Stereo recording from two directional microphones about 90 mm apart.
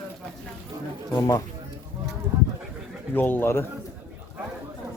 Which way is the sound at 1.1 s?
40° left (ahead or behind).